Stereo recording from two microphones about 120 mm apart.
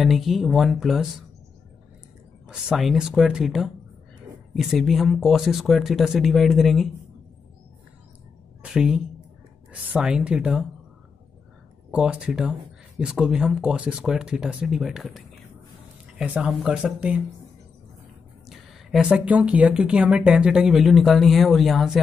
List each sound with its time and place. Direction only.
0.0 s speech: centre (ahead or behind)
2.4 s speech: 5° right (ahead or behind)
8.6 s a woman's voice: 5° right (ahead or behind)
11.9 s a woman's voice: 5° right (ahead or behind)
18.5 s speech: centre (ahead or behind)